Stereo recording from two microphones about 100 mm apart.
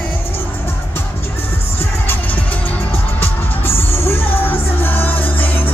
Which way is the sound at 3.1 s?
25° left (ahead or behind).